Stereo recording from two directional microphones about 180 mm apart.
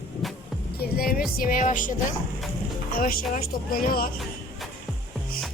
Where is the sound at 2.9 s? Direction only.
50° left (ahead or behind).